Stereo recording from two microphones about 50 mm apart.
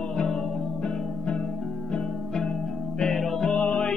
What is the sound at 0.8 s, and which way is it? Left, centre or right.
Music, left.